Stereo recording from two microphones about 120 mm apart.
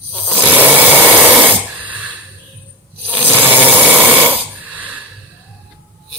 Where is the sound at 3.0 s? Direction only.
15° right (ahead or behind).